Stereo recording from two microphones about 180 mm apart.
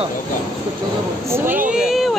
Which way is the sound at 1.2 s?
15° right (ahead or behind).